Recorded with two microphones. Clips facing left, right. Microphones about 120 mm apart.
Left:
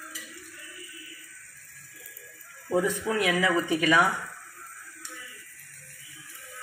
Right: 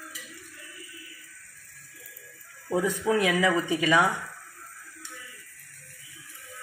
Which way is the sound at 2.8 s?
20° right (ahead or behind).